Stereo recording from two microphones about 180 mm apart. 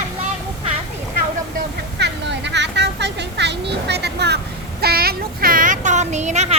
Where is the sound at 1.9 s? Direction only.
75° right (ahead or behind).